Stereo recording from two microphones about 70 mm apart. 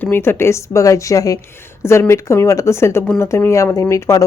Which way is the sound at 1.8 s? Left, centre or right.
Left.